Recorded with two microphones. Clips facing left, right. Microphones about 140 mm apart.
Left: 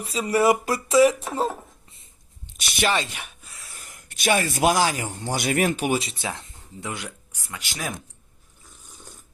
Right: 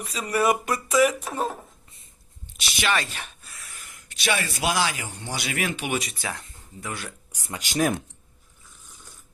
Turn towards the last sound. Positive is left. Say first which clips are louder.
# right 2 dB
turn(degrees=-20)  # may be behind; listen again after turning